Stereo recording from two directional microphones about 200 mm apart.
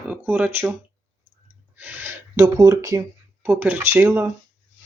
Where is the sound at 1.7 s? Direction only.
10° right (ahead or behind).